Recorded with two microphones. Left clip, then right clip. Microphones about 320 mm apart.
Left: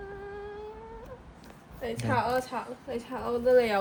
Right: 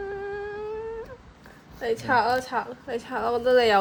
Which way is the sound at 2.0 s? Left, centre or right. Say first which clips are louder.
Right 5 dB; right.